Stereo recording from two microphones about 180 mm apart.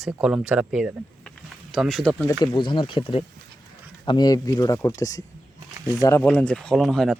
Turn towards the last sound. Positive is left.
turn(degrees=0)  # may be behind; listen again after turning